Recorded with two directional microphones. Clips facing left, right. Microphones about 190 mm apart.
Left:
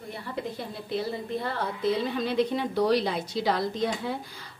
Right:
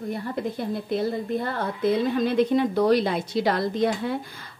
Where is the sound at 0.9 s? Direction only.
45° right (ahead or behind).